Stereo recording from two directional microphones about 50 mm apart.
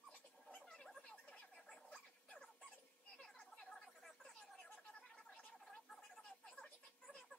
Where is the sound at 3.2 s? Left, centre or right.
Centre.